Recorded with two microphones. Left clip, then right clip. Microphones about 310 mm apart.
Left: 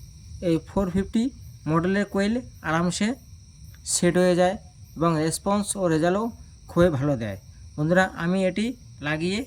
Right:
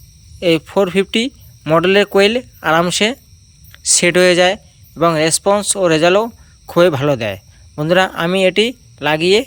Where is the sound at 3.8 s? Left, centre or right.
Centre.